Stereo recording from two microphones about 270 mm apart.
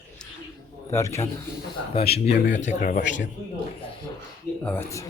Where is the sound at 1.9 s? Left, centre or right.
Left.